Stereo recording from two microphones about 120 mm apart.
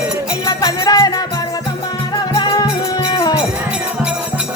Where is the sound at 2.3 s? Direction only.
35° left (ahead or behind).